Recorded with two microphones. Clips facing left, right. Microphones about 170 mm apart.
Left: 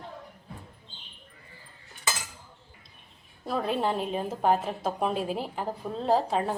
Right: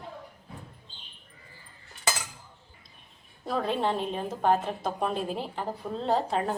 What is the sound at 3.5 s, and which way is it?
A woman's voice, 5° left (ahead or behind).